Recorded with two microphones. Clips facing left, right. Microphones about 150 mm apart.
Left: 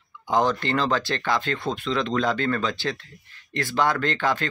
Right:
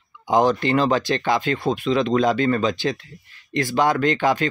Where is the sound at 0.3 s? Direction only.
15° right (ahead or behind).